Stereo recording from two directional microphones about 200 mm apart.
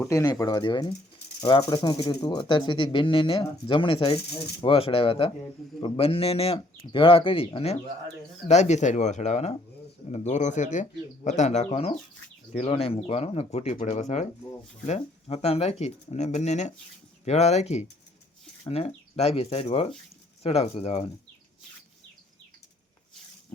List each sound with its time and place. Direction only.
0.1 s speech: 15° left (ahead or behind)